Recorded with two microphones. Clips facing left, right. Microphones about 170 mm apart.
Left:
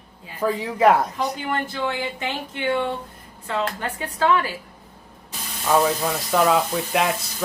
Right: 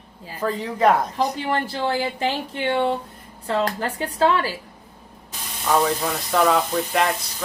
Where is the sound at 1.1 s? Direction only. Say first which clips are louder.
Right 3 dB; 35° right (ahead or behind).